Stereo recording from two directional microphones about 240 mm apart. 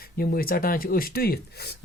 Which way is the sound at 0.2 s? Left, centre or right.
Left.